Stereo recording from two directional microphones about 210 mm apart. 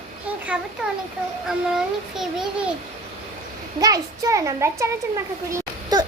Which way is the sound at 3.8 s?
15° right (ahead or behind).